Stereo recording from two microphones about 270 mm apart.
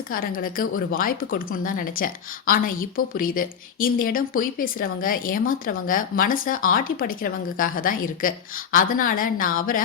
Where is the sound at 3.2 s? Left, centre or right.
Left.